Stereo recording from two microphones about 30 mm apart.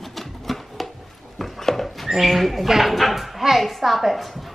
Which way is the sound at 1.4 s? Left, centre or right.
Centre.